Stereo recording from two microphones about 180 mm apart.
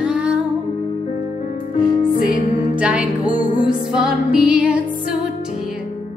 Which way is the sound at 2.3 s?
50° left (ahead or behind).